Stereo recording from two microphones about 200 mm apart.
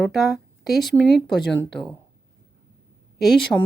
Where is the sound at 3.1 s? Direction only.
Centre (ahead or behind).